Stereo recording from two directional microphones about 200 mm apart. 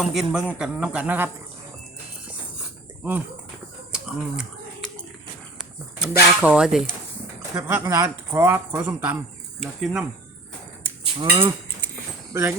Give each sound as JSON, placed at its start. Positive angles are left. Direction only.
{"t": 0.0, "sound": "a man's voice", "side_deg": 0}
{"t": 3.0, "sound": "speech", "side_deg": -10}
{"t": 3.9, "sound": "a sound", "side_deg": -5}
{"t": 6.0, "sound": "a man's voice", "side_deg": -5}
{"t": 11.2, "sound": "livestock", "side_deg": -25}
{"t": 12.3, "sound": "speech", "side_deg": -10}